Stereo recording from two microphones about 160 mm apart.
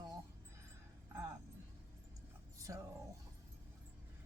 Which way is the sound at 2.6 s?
20° right (ahead or behind).